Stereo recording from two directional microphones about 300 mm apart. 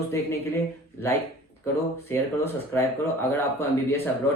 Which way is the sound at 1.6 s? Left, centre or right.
Centre.